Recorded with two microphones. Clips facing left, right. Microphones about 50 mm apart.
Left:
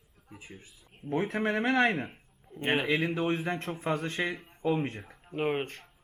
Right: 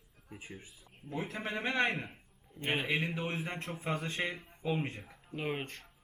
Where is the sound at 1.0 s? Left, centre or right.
Left.